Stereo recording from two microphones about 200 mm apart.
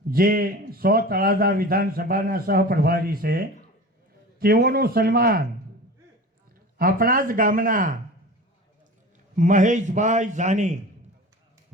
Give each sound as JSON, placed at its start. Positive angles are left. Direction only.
{"t": 0.1, "sound": "a man's voice", "side_deg": -45}
{"t": 6.7, "sound": "a man's voice", "side_deg": -45}
{"t": 9.3, "sound": "a man's voice", "side_deg": -40}